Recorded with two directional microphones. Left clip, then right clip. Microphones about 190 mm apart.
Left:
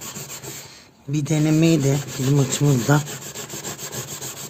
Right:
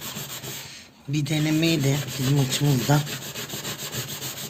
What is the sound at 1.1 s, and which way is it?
Speech, 45° left (ahead or behind).